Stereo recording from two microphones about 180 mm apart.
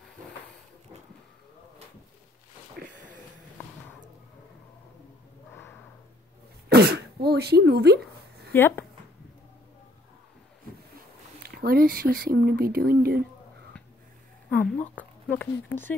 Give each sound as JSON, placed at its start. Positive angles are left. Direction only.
{"t": 2.8, "sound": "a sound", "side_deg": -60}
{"t": 6.7, "sound": "throat clearing", "side_deg": -65}
{"t": 7.2, "sound": "a sound", "side_deg": -65}
{"t": 8.5, "sound": "speech", "side_deg": 10}
{"t": 11.4, "sound": "speech", "side_deg": -55}
{"t": 14.5, "sound": "speech", "side_deg": 5}